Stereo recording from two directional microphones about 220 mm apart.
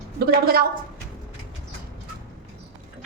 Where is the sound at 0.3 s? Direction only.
45° right (ahead or behind).